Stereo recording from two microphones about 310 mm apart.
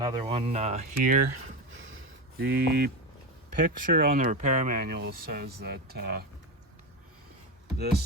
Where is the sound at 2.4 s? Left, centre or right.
Right.